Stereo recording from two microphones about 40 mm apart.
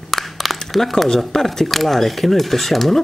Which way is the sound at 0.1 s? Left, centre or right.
Centre.